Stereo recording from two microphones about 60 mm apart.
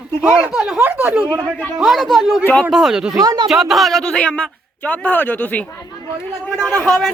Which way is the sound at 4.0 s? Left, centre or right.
Centre.